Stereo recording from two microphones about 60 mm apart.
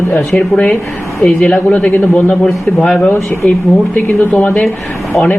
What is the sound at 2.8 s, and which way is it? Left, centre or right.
Speech, centre.